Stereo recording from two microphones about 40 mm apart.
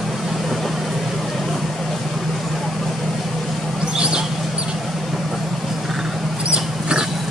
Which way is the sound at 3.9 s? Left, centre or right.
Right.